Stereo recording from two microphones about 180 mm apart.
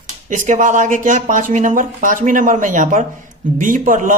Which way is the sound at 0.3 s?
45° right (ahead or behind).